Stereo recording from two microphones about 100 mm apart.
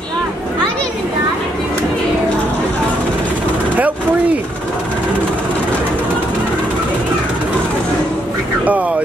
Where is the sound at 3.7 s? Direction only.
15° right (ahead or behind).